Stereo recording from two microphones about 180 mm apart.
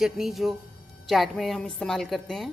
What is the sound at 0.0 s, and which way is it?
A woman's voice, centre (ahead or behind).